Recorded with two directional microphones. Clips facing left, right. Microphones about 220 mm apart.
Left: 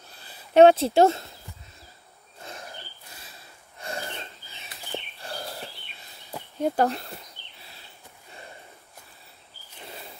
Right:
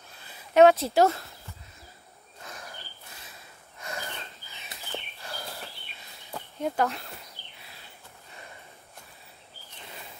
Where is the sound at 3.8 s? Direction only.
30° left (ahead or behind).